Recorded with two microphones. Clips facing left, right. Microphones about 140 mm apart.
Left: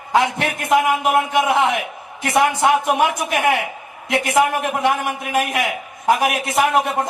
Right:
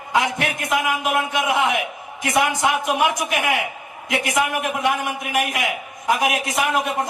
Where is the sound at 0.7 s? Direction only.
30° left (ahead or behind).